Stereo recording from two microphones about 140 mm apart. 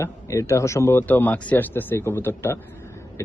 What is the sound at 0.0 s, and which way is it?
Speech, 20° left (ahead or behind).